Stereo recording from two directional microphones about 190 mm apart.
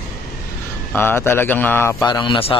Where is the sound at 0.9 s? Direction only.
10° left (ahead or behind).